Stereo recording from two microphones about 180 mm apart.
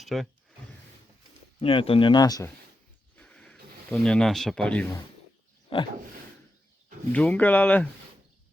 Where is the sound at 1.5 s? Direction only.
30° left (ahead or behind).